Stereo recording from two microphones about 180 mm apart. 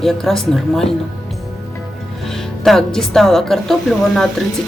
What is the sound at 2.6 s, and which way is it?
Speech, centre (ahead or behind).